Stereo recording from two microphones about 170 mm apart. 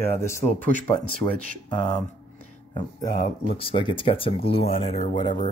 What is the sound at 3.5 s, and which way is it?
Speech, 30° left (ahead or behind).